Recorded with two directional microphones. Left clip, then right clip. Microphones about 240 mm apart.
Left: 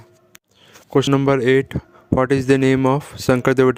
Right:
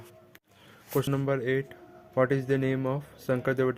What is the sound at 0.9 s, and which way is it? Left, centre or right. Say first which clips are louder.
Speech: left 12 dB; left.